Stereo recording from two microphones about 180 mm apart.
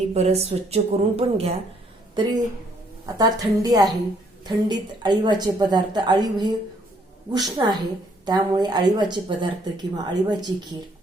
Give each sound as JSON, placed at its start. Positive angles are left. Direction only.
{"t": 0.1, "sound": "a woman's voice", "side_deg": -35}
{"t": 2.1, "sound": "a woman's voice", "side_deg": -25}